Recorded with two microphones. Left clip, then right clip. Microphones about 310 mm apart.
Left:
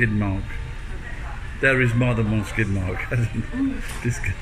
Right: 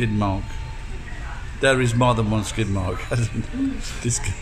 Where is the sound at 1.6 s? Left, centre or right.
Right.